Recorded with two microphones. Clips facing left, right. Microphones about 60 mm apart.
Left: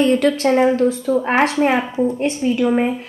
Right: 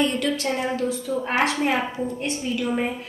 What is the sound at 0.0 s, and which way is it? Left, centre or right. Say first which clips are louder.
A woman's voice: left 8 dB; left.